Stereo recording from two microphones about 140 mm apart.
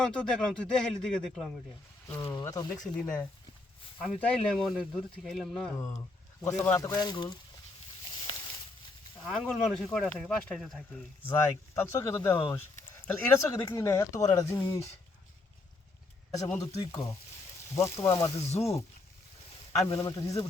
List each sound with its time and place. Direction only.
0.0 s speech: 5° left (ahead or behind)
2.0 s speech: 20° left (ahead or behind)
2.8 s speech: 10° left (ahead or behind)
5.7 s a man's voice: 20° left (ahead or behind)
9.2 s speech: centre (ahead or behind)
11.3 s speech: 20° left (ahead or behind)
16.6 s speech: 25° left (ahead or behind)
18.3 s speech: 50° left (ahead or behind)
18.6 s speech: 20° left (ahead or behind)
19.9 s speech: 25° left (ahead or behind)